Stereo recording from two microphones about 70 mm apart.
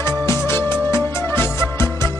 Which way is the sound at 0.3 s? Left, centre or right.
Left.